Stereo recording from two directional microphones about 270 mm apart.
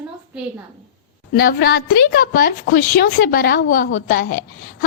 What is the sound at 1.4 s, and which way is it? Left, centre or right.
A woman's voice, left.